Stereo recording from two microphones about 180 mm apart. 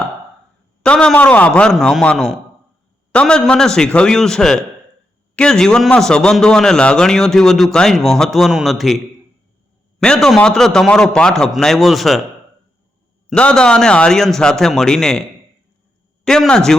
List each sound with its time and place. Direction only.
0.8 s a man's voice: 5° left (ahead or behind)
10.0 s a man's voice: 5° left (ahead or behind)
13.3 s a man's voice: 5° left (ahead or behind)
16.2 s a man's voice: 5° left (ahead or behind)